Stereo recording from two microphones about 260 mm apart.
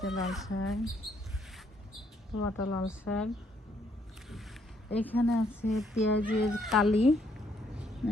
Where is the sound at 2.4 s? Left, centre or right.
Left.